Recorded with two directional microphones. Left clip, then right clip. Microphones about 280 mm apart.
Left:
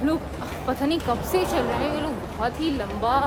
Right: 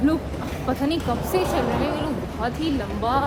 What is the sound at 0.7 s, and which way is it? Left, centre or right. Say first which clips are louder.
A woman's voice: even; centre.